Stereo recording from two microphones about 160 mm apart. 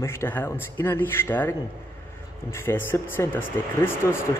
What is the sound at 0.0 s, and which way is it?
A man's voice, 15° left (ahead or behind).